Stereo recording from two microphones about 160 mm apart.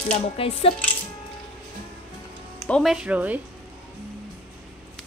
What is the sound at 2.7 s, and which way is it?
Speech, centre (ahead or behind).